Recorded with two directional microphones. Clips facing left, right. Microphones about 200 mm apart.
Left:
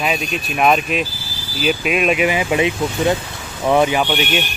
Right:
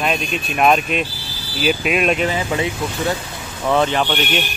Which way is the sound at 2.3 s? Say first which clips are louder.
Left 3 dB; 15° left (ahead or behind).